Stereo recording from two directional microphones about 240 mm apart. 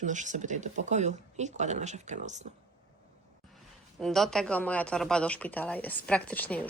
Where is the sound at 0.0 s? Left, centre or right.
Right.